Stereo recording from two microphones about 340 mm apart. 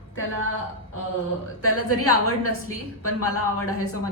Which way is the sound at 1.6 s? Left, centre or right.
Left.